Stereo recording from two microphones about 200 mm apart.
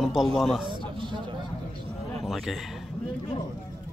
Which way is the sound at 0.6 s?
25° right (ahead or behind).